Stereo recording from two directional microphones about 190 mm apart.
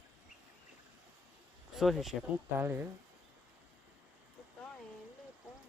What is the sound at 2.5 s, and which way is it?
Speech, 10° right (ahead or behind).